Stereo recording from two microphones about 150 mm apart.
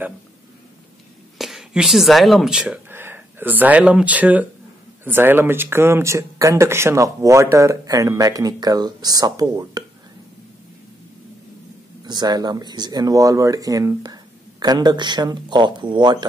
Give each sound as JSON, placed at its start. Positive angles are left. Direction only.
{"t": 1.4, "sound": "speech", "side_deg": 0}
{"t": 12.0, "sound": "speech", "side_deg": -30}